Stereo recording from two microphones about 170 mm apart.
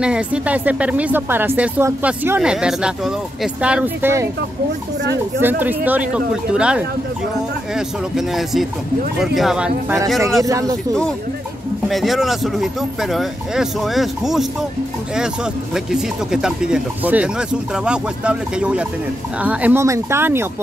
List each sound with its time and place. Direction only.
0.0 s speech: 5° right (ahead or behind)
5.4 s speech: 10° right (ahead or behind)
10.4 s speech: 20° right (ahead or behind)
11.9 s speech: centre (ahead or behind)
15.7 s speech: 5° right (ahead or behind)